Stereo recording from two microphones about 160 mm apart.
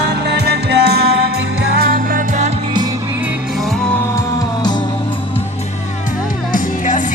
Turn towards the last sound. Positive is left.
turn(degrees=55)  # may be behind; listen again after turning